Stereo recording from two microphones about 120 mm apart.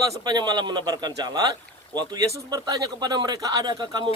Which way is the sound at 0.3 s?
35° right (ahead or behind).